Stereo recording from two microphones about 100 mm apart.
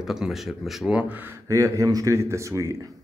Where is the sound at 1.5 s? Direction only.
30° right (ahead or behind).